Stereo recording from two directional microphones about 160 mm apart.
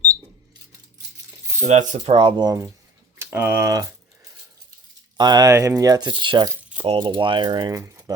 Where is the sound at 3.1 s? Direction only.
15° right (ahead or behind).